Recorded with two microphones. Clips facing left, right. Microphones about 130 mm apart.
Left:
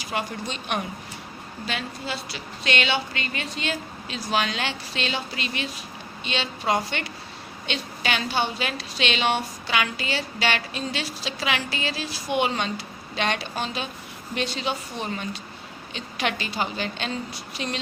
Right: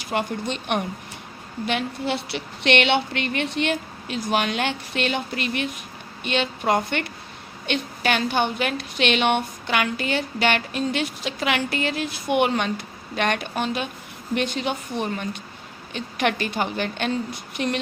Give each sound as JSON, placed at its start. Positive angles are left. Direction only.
{"t": 0.0, "sound": "a woman's voice", "side_deg": -55}